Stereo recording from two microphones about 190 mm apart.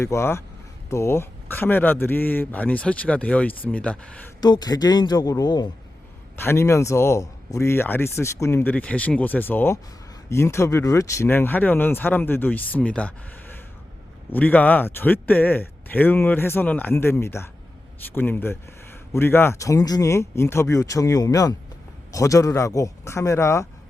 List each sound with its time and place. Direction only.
0.0 s speech: 15° left (ahead or behind)
4.4 s a man's voice: 20° left (ahead or behind)